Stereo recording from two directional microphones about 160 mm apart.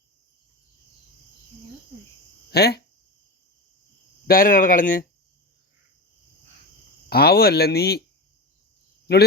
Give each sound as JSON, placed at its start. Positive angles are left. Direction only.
{"t": 2.5, "sound": "speech", "side_deg": 90}
{"t": 4.3, "sound": "speech", "side_deg": 60}
{"t": 7.1, "sound": "speech", "side_deg": 80}
{"t": 9.1, "sound": "speech", "side_deg": 90}